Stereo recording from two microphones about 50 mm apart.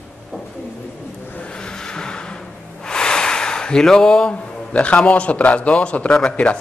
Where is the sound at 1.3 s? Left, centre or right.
Centre.